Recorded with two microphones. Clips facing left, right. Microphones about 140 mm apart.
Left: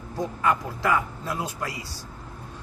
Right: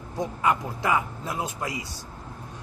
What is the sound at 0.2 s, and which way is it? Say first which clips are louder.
A man's voice: even; 20° right (ahead or behind).